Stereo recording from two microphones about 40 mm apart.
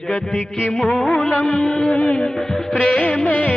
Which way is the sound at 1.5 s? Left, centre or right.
Left.